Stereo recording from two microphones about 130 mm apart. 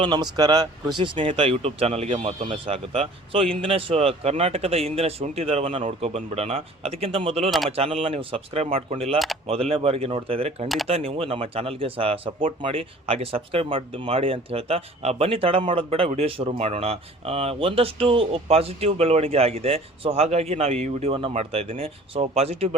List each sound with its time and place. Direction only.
0.0 s speech: 35° right (ahead or behind); by 2.5 s 60° right (ahead or behind)
2.5 s speech: 45° right (ahead or behind)
9.1 s speech: centre (ahead or behind)
9.5 s speech: 45° right (ahead or behind)